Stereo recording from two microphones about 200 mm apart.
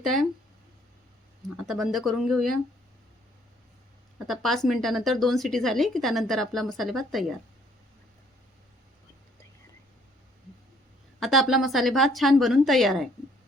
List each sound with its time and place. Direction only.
0.0 s speech: centre (ahead or behind)
1.6 s speech: centre (ahead or behind)
4.3 s speech: centre (ahead or behind)
11.2 s speech: centre (ahead or behind)